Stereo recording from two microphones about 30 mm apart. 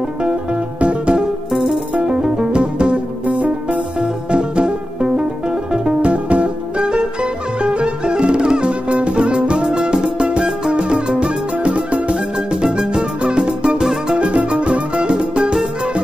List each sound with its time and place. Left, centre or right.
0.7 s music: right
1.5 s music: centre
2.2 s music: right
3.3 s music: right
4.0 s music: right
12.6 s music: right
13.7 s music: centre
14.1 s music: right